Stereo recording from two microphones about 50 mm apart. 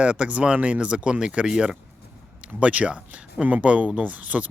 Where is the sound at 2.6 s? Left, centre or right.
Right.